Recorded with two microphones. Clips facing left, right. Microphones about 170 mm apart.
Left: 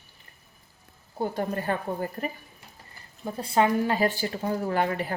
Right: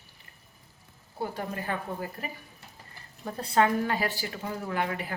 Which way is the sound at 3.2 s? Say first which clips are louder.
Left 1 dB; 20° left (ahead or behind).